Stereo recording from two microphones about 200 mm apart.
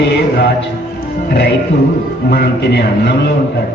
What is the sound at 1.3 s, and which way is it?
A man's voice, 55° left (ahead or behind).